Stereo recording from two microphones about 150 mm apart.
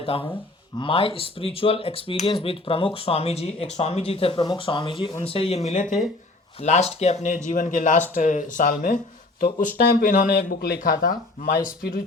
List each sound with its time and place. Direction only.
0.0 s speech: 40° left (ahead or behind); by 12.0 s 80° left